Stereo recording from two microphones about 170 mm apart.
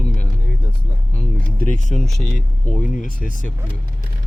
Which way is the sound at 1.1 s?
45° left (ahead or behind).